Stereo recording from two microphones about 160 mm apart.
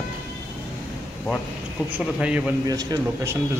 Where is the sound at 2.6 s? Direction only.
25° right (ahead or behind).